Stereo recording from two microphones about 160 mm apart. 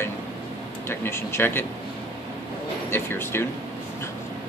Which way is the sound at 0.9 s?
15° left (ahead or behind).